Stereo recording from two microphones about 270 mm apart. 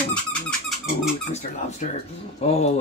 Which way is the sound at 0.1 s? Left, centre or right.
Centre.